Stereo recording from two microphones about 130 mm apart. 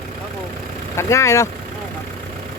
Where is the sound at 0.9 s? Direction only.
20° left (ahead or behind).